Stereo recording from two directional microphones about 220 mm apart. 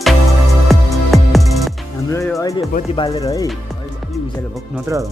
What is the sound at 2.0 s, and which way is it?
Music, 15° left (ahead or behind).